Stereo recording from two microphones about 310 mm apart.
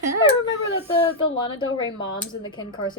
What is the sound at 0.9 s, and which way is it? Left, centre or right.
Speech, centre.